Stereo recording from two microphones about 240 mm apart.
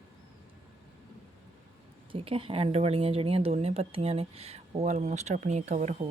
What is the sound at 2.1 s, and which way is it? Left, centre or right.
Speech, right.